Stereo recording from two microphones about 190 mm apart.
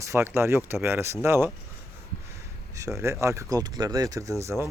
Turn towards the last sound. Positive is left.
turn(degrees=-15)  # may be behind; listen again after turning